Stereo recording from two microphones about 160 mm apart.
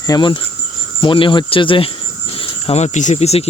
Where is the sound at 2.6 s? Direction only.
45° left (ahead or behind).